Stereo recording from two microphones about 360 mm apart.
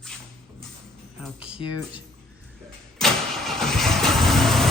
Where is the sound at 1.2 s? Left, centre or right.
Centre.